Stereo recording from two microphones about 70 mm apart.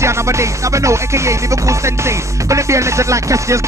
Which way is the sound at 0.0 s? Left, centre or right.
Right.